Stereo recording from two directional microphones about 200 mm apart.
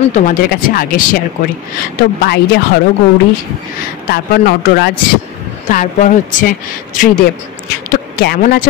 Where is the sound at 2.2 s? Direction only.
55° left (ahead or behind).